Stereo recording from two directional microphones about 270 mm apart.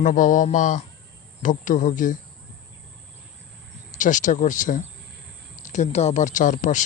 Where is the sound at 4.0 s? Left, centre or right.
Left.